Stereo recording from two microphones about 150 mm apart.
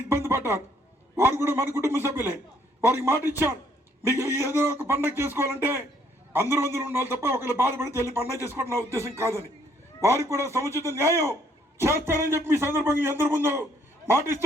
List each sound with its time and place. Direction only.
0.1 s a man's voice: 15° right (ahead or behind)